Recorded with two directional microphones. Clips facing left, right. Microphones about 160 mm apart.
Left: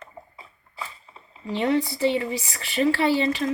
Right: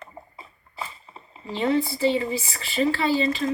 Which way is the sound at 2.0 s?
60° left (ahead or behind).